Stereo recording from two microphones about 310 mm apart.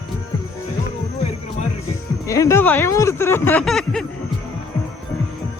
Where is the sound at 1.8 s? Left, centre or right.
Centre.